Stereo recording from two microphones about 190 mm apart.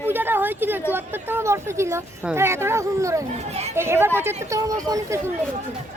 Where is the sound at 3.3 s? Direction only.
35° right (ahead or behind).